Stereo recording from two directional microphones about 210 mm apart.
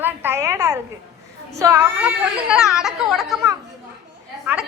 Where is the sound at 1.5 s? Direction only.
15° right (ahead or behind).